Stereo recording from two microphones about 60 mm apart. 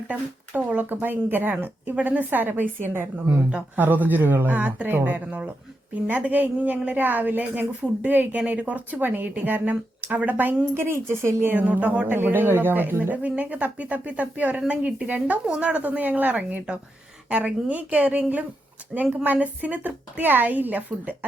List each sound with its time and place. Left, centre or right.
0.1 s a woman's voice: right
3.2 s a woman's voice: right
10.8 s speech: right
11.6 s a woman's voice: right
12.1 s a woman's voice: right